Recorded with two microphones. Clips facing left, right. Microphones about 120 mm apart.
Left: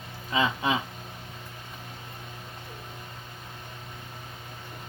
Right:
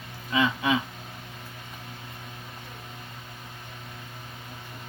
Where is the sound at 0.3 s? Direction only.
25° left (ahead or behind).